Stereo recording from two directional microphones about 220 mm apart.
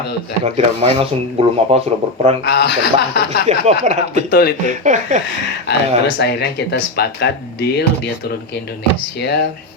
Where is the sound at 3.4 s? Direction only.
30° right (ahead or behind).